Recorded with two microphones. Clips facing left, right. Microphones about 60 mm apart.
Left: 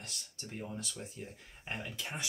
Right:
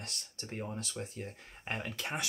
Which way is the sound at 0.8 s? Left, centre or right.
Right.